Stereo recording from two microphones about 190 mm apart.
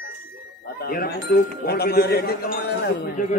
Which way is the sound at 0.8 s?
55° left (ahead or behind).